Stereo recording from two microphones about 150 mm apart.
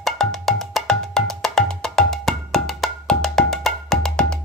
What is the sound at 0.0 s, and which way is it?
Music, centre (ahead or behind).